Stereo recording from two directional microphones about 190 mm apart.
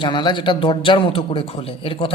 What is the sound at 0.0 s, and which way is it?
Speech, 25° left (ahead or behind).